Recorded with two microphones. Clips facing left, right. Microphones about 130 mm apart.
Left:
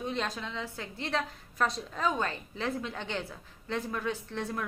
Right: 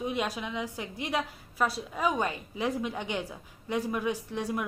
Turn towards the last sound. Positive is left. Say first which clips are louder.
# right 3 dB
turn(degrees=-10)  # may be behind; listen again after turning